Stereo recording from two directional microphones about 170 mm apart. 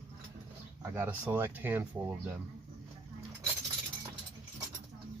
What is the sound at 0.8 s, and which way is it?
Speech, 10° right (ahead or behind).